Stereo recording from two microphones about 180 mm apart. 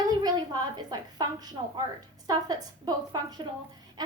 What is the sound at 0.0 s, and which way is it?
A woman's voice, 20° right (ahead or behind).